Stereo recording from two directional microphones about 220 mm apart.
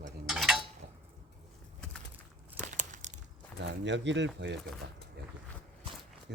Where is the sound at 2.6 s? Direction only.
35° right (ahead or behind).